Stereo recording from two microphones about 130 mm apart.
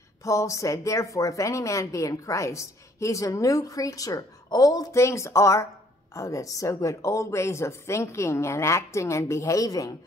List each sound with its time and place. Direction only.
0.2 s a woman's voice: 25° left (ahead or behind)